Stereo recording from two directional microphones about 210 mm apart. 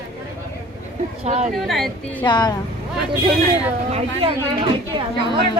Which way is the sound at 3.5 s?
25° right (ahead or behind).